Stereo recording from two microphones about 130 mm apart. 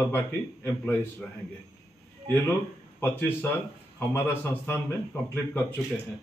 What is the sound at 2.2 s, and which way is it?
Speech, 20° left (ahead or behind).